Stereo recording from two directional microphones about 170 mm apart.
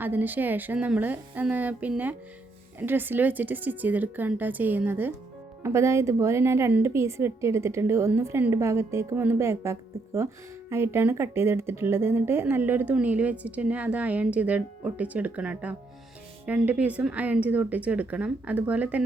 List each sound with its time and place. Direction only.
0.0 s speech: 10° right (ahead or behind)